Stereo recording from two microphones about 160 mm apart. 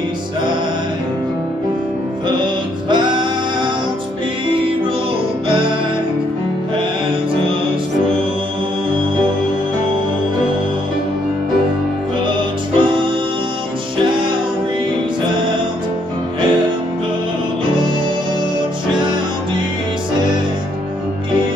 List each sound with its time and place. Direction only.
2.2 s music: 30° right (ahead or behind)
5.5 s music: 30° right (ahead or behind)
12.3 s music: 30° right (ahead or behind)